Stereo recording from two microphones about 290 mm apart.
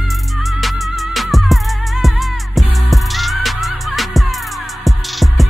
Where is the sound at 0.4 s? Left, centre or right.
Centre.